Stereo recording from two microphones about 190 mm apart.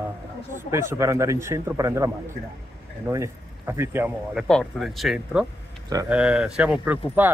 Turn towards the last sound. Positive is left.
turn(degrees=-10)  # may be behind; listen again after turning